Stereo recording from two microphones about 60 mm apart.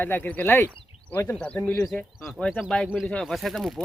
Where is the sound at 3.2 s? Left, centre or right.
Centre.